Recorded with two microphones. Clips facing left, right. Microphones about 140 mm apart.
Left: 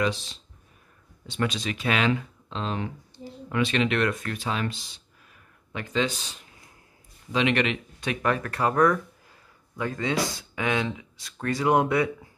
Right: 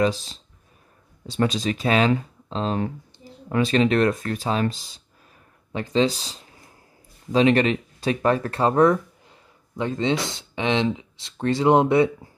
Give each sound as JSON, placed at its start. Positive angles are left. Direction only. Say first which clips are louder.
{"t": 0.0, "sound": "speech", "louder": "right 5 dB", "side_deg": -35}